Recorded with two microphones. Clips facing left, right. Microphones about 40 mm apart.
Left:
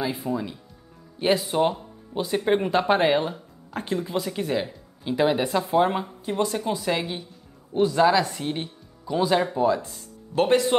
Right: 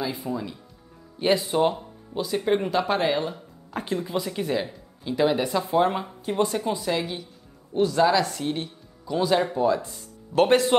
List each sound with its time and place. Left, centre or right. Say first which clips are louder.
0.0 s speech: left 2 dB; centre
2.1 s speech: left 1 dB; centre
3.3 s speech: left 1 dB; centre
6.0 s speech: right 1 dB; centre
6.9 s speech: left 1 dB; centre
10.3 s speech: right 3 dB; right
10.7 s speech: right 2 dB; centre